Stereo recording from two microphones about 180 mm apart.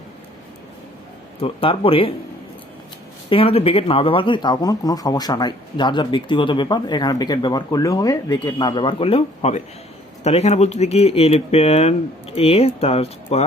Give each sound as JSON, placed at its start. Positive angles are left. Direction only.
{"t": 1.4, "sound": "speech", "side_deg": 30}
{"t": 3.2, "sound": "speech", "side_deg": 30}